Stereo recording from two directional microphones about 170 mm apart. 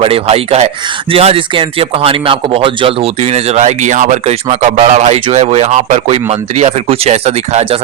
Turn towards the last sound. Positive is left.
turn(degrees=-40)  # may be behind; listen again after turning